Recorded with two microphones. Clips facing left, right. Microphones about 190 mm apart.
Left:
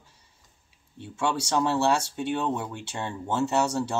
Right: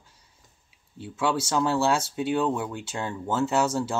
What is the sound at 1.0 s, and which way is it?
Speech, 5° right (ahead or behind).